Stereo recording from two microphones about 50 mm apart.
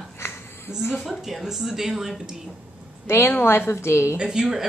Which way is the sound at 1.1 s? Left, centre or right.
Centre.